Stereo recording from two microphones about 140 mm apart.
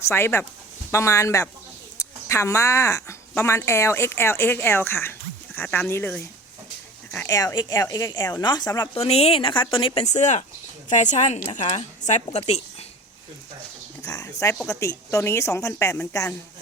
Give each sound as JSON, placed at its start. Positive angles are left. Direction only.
{"t": 0.1, "sound": "speech", "side_deg": 15}
{"t": 9.0, "sound": "a woman's voice", "side_deg": 45}
{"t": 14.1, "sound": "speech", "side_deg": 25}